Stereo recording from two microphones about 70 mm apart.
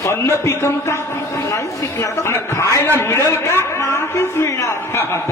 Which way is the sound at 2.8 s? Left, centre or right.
Left.